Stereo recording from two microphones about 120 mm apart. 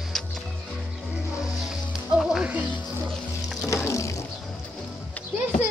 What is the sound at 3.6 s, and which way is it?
Music, 25° left (ahead or behind).